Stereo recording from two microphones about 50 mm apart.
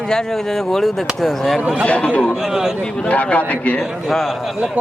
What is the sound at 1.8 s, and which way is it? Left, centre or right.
Speech, left.